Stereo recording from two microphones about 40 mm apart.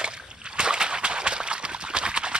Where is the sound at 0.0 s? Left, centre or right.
Right.